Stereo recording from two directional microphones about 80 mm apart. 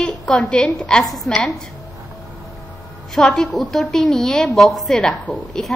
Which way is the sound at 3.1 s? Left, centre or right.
Centre.